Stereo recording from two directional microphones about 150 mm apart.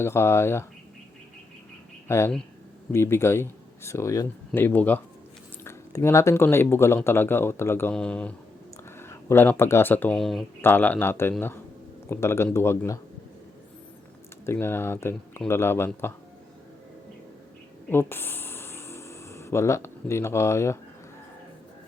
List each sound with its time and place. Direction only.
0.0 s speech: 15° left (ahead or behind)
2.0 s speech: 15° left (ahead or behind); by 10.4 s centre (ahead or behind)
10.6 s speech: 15° left (ahead or behind)
14.4 s speech: 15° left (ahead or behind)
17.8 s music: 15° left (ahead or behind)